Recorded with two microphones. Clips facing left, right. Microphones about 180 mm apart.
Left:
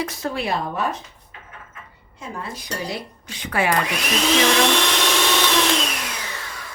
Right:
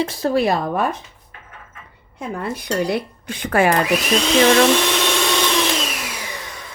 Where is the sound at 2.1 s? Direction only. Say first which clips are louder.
Right 6 dB; 60° right (ahead or behind).